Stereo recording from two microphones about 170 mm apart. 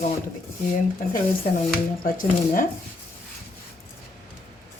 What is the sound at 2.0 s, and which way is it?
Speech, 55° left (ahead or behind).